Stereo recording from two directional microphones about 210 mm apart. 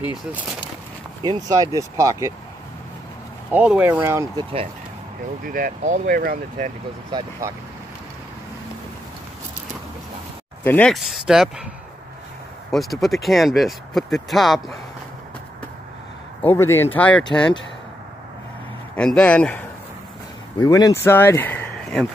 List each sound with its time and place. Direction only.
1.2 s speech: 20° right (ahead or behind)
3.5 s speech: 5° right (ahead or behind)
5.4 s speech: 40° right (ahead or behind)
7.1 s speech: 20° right (ahead or behind)
10.6 s speech: 5° left (ahead or behind)
12.7 s speech: centre (ahead or behind)
16.4 s speech: 10° left (ahead or behind)
18.9 s speech: 5° left (ahead or behind)
20.5 s speech: 20° left (ahead or behind)